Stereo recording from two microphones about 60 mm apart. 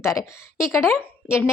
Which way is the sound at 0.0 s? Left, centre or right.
Left.